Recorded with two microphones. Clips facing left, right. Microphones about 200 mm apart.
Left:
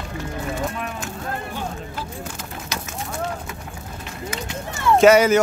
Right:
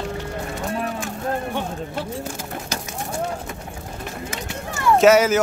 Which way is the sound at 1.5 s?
70° right (ahead or behind).